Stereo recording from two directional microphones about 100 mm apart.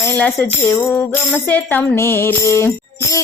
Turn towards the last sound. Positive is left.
turn(degrees=30)  # may be behind; listen again after turning